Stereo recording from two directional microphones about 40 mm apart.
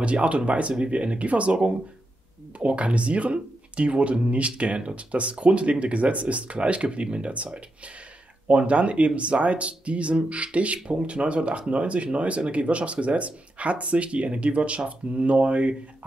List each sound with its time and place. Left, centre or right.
0.0 s speech: right
8.5 s speech: right